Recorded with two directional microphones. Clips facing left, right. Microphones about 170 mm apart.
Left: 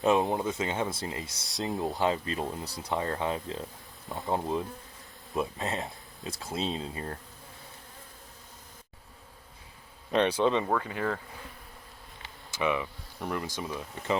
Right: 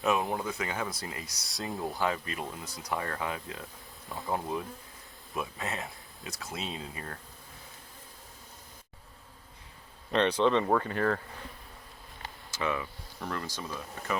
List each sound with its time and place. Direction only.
0.0 s speech: 25° left (ahead or behind)
5.6 s speech: 25° left (ahead or behind)
10.1 s speech: 10° left (ahead or behind)
12.5 s speech: 15° left (ahead or behind)